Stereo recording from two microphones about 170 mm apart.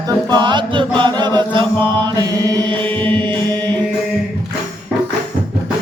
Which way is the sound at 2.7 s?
10° left (ahead or behind).